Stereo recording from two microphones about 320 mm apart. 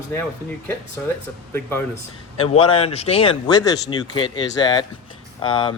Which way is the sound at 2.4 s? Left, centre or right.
Centre.